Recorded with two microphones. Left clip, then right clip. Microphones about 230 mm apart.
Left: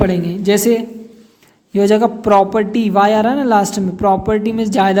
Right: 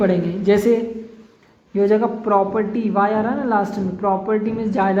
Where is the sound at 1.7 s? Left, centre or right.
Left.